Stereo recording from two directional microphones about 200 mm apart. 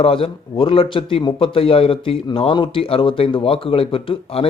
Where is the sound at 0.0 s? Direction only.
25° left (ahead or behind).